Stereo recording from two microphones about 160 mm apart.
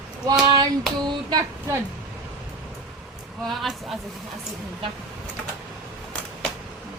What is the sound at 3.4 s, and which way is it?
Speech, centre (ahead or behind).